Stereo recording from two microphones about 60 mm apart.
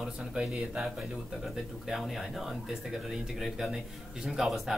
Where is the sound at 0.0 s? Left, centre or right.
Centre.